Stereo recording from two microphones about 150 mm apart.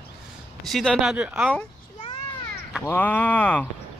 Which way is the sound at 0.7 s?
Centre (ahead or behind).